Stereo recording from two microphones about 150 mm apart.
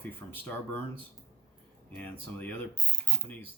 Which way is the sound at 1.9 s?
10° left (ahead or behind).